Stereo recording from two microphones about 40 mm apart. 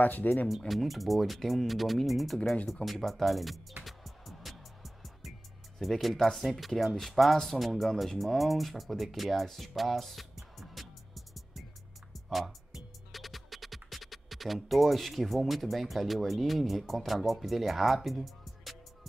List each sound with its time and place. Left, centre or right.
0.0 s speech: left
0.6 s speech: centre
3.8 s music: centre
5.8 s speech: centre
12.1 s music: centre
13.1 s speech: centre